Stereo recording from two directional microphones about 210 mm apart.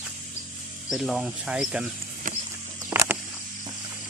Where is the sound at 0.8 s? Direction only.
Centre (ahead or behind).